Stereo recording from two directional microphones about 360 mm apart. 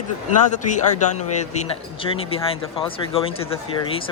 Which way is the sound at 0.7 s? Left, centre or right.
Centre.